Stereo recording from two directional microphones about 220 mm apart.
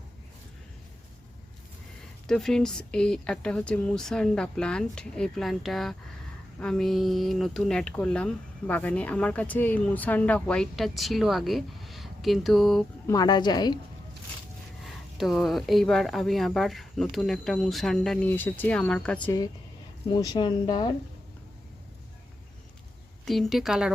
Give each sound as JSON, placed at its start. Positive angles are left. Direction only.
{"t": 2.2, "sound": "speech", "side_deg": 0}
{"t": 13.1, "sound": "speech", "side_deg": 20}
{"t": 15.2, "sound": "speech", "side_deg": 0}
{"t": 20.1, "sound": "speech", "side_deg": 20}
{"t": 23.2, "sound": "speech", "side_deg": 0}